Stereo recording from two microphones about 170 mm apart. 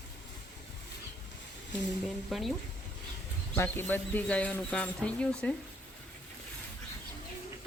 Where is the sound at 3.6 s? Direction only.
15° left (ahead or behind).